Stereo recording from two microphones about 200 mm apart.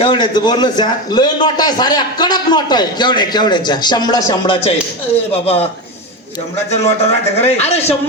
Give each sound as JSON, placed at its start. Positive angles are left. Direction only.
{"t": 0.0, "sound": "a man's voice", "side_deg": 25}
{"t": 6.7, "sound": "a man's voice", "side_deg": 30}